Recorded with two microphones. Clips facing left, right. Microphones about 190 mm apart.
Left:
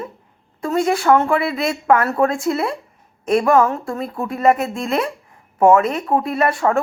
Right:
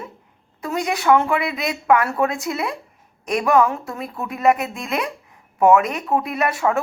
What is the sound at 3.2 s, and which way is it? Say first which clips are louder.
Speech: left 3 dB; 35° left (ahead or behind).